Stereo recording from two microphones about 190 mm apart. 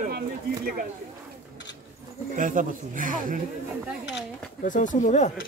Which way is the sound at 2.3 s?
45° right (ahead or behind).